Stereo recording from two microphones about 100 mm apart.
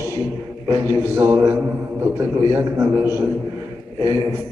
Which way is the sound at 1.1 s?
25° right (ahead or behind).